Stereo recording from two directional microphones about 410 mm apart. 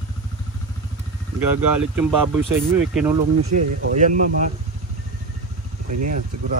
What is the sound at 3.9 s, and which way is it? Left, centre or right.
Speech, centre.